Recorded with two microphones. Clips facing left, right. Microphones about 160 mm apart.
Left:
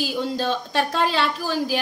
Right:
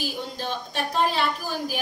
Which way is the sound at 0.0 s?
90° left.